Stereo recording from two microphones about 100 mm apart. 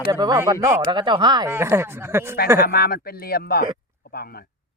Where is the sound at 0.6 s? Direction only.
25° right (ahead or behind).